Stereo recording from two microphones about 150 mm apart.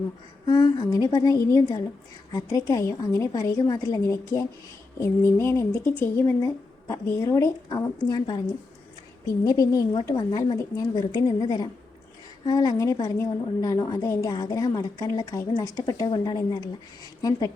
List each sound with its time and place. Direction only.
0.4 s speech: 30° left (ahead or behind)
9.4 s speech: 25° left (ahead or behind)